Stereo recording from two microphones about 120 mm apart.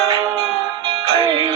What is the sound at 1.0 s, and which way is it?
Music, 30° right (ahead or behind).